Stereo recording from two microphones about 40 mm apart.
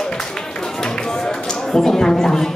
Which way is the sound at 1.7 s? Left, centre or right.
Centre.